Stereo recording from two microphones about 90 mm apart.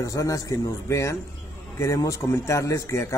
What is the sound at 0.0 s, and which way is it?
A man's voice, 40° left (ahead or behind).